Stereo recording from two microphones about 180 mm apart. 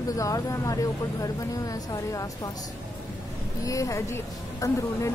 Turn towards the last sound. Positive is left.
turn(degrees=15)  # may be behind; listen again after turning